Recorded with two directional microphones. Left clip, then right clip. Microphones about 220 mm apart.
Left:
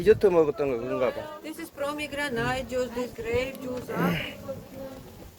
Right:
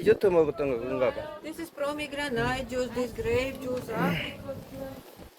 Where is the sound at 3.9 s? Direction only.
20° left (ahead or behind).